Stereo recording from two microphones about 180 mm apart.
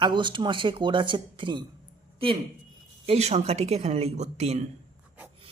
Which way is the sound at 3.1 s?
35° right (ahead or behind).